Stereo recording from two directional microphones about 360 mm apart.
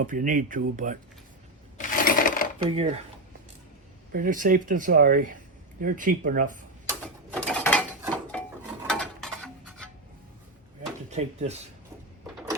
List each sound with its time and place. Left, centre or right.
0.0 s speech: right
1.8 s coin: left
2.6 s speech: centre
4.1 s speech: right
7.3 s mechanisms: centre
8.6 s a sound: centre
11.1 s speech: centre